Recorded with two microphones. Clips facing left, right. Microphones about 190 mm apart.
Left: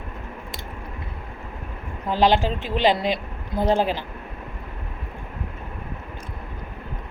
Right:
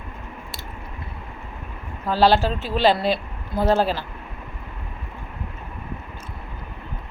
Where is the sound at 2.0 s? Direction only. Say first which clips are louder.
Right 1 dB; 15° left (ahead or behind).